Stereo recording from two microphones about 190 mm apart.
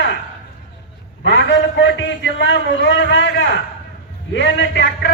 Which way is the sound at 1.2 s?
65° left (ahead or behind).